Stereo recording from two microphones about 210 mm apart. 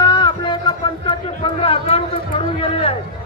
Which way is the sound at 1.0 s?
25° left (ahead or behind).